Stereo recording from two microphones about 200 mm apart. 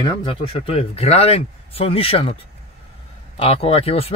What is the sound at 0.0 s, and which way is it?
Speech, 25° left (ahead or behind).